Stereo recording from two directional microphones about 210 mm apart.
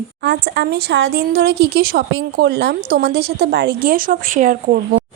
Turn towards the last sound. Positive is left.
turn(degrees=-40)  # may be behind; listen again after turning